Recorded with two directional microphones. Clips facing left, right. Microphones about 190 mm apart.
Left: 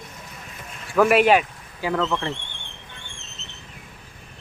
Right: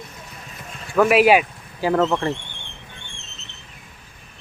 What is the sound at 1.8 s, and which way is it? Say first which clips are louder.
Speech: right 5 dB; 40° right (ahead or behind).